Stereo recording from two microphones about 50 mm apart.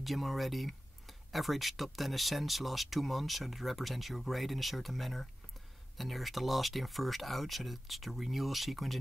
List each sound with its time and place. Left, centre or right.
0.0 s speech: centre